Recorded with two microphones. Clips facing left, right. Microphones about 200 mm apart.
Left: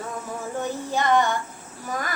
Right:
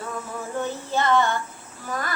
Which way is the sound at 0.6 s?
15° left (ahead or behind).